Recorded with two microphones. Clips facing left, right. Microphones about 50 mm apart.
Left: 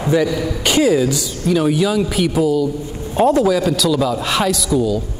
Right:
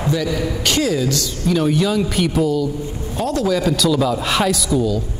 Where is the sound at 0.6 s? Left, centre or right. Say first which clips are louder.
Left 6 dB; centre.